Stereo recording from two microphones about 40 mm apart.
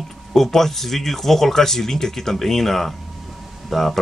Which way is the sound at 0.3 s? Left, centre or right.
Centre.